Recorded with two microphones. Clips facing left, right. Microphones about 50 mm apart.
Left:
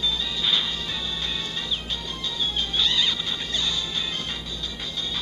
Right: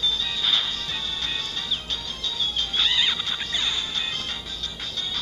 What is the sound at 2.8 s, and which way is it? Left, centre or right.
Music, right.